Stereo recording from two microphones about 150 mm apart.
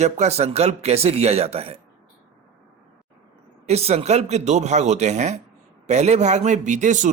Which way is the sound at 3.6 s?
45° right (ahead or behind).